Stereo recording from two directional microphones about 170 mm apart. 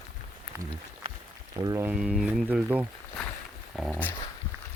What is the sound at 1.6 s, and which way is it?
Speech, 20° right (ahead or behind).